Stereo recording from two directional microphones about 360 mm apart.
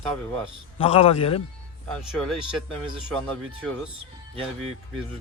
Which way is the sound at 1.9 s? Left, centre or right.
Centre.